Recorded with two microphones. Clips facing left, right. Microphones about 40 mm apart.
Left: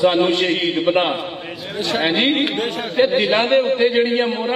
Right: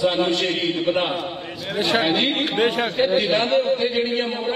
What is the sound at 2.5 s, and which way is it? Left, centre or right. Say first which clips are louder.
Speech: right 3 dB; right.